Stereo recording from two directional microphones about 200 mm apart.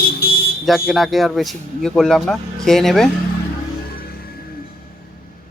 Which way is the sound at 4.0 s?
50° left (ahead or behind).